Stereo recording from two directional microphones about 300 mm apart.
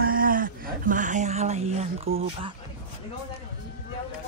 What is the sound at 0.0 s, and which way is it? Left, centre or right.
Speech, right.